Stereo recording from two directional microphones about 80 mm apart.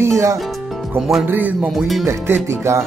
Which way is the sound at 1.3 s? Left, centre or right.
Right.